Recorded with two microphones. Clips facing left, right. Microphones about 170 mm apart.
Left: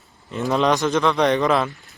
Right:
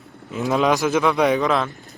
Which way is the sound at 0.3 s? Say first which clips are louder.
Even; 5° right (ahead or behind).